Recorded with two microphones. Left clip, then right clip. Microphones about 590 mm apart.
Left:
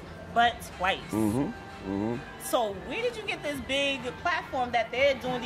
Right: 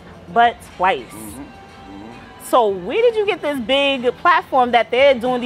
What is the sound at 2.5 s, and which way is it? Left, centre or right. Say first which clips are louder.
A woman's voice: right 13 dB; right.